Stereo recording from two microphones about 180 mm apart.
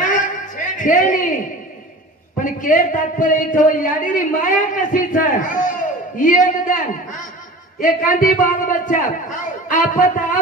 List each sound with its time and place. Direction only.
0.7 s a man's voice: 45° left (ahead or behind)
2.4 s a man's voice: 50° left (ahead or behind)